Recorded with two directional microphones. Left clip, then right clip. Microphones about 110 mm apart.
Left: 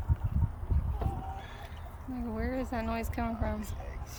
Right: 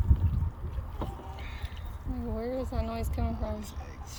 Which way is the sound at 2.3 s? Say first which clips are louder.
Right 1 dB; 15° left (ahead or behind).